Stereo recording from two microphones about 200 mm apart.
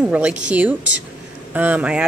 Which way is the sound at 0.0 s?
5° right (ahead or behind).